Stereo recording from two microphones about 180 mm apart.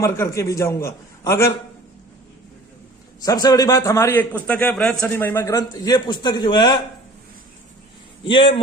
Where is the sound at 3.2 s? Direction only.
20° left (ahead or behind).